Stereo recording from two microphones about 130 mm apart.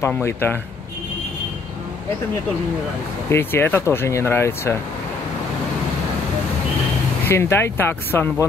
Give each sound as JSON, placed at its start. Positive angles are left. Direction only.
{"t": 0.1, "sound": "speech", "side_deg": 15}
{"t": 3.3, "sound": "speech", "side_deg": 20}
{"t": 7.2, "sound": "speech", "side_deg": 20}